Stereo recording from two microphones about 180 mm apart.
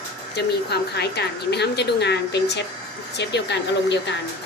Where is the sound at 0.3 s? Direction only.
65° left (ahead or behind).